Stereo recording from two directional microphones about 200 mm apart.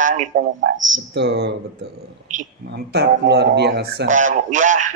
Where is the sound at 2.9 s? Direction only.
55° right (ahead or behind).